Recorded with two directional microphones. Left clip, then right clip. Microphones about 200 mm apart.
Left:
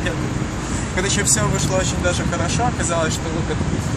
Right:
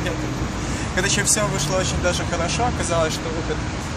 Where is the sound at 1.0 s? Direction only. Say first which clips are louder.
Even; 15° right (ahead or behind).